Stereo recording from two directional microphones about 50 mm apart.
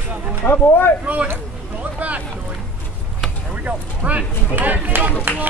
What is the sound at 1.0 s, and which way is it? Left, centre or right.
Speech, right.